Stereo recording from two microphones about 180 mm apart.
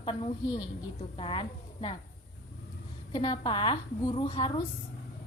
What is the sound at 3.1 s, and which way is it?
A woman's voice, 30° left (ahead or behind).